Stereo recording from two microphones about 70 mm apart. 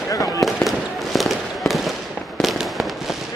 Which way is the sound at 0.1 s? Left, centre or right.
Left.